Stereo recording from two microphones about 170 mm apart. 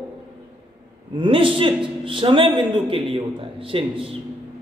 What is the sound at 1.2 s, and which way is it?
A man's voice, 30° right (ahead or behind).